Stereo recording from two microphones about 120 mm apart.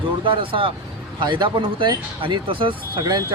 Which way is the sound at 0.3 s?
45° right (ahead or behind).